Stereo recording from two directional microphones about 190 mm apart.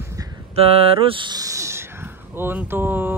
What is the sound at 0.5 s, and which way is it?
Speech, 30° right (ahead or behind).